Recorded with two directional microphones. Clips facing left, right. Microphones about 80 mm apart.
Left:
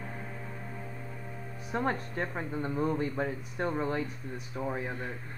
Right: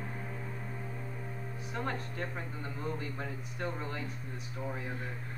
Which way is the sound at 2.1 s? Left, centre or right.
Left.